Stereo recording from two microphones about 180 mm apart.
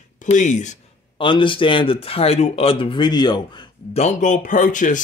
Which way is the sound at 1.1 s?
30° left (ahead or behind).